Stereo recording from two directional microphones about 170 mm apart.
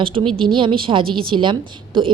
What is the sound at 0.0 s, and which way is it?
A woman's voice, 30° right (ahead or behind).